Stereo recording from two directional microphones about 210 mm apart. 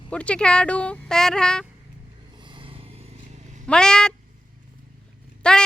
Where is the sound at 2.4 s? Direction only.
25° right (ahead or behind).